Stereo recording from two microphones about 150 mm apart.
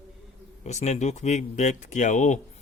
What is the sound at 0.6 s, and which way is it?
A man's voice, 50° left (ahead or behind).